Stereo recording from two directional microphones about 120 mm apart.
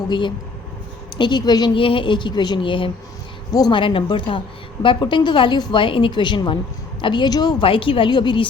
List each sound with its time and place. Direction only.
0.1 s a woman's voice: 40° left (ahead or behind)
7.6 s a woman's voice: 45° left (ahead or behind)